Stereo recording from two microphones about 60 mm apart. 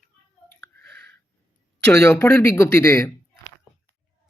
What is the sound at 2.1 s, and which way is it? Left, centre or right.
Speech, left.